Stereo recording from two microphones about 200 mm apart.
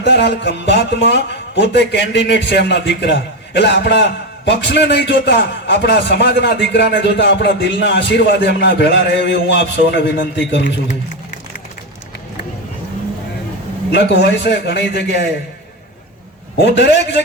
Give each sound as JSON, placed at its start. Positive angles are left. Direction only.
{"t": 0.0, "sound": "a man's voice", "side_deg": 60}
{"t": 13.9, "sound": "a man's voice", "side_deg": 60}
{"t": 16.6, "sound": "a man's voice", "side_deg": 60}